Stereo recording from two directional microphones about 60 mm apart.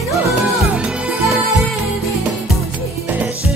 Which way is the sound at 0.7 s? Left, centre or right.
Centre.